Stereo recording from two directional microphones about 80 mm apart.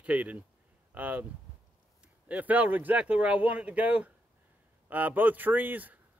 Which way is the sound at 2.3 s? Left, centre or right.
Centre.